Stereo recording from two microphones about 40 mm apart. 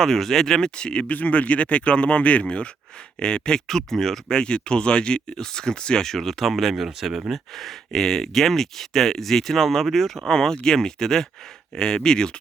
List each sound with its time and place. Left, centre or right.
0.0 s speech: centre
1.0 s speech: left; by 4.4 s centre
4.4 s speech: left
6.1 s speech: centre
7.5 s speech: centre
10.2 s speech: centre